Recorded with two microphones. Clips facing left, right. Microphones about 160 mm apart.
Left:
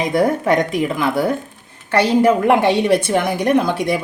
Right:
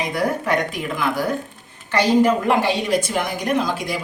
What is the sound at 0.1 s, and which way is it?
A woman's voice, 25° left (ahead or behind).